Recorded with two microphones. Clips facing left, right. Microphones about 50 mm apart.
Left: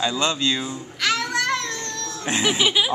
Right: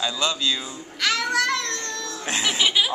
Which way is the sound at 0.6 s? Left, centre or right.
Centre.